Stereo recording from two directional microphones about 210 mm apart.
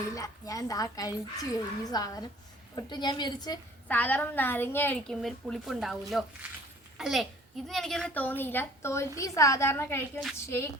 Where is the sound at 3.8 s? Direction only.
5° left (ahead or behind).